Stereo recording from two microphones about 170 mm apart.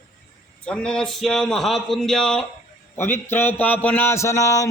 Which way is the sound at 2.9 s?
15° left (ahead or behind).